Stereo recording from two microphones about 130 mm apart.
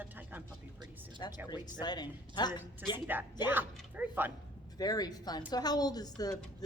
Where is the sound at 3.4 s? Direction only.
15° right (ahead or behind).